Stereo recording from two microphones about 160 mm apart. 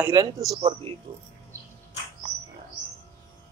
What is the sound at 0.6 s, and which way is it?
Speech, 35° right (ahead or behind).